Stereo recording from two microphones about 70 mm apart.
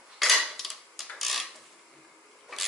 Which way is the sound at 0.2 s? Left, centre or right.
Centre.